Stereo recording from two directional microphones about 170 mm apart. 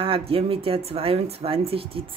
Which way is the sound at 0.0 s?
35° right (ahead or behind).